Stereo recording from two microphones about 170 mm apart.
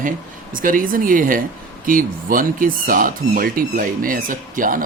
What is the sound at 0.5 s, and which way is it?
Speech, 50° right (ahead or behind).